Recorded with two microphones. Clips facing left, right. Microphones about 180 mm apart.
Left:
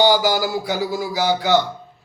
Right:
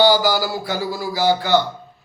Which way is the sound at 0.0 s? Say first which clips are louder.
Right 1 dB; 15° left (ahead or behind).